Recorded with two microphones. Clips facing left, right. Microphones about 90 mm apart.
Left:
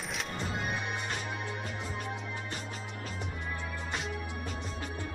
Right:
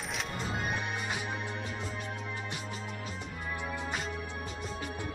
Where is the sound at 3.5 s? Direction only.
15° right (ahead or behind).